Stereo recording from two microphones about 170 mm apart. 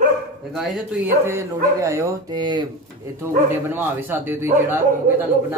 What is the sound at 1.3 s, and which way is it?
Speech, 15° right (ahead or behind).